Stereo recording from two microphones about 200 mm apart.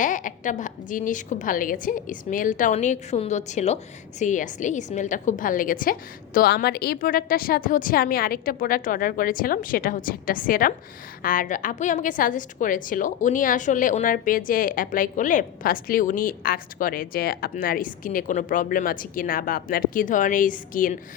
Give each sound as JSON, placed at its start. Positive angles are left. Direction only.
{"t": 0.0, "sound": "a woman's voice", "side_deg": 40}